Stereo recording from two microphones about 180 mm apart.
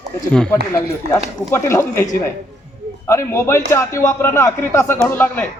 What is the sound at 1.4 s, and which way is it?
A man's voice, 15° left (ahead or behind).